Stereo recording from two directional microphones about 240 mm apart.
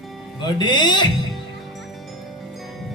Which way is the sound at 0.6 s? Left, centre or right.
Centre.